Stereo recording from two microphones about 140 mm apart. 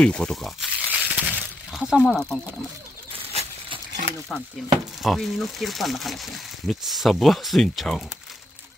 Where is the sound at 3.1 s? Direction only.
45° right (ahead or behind).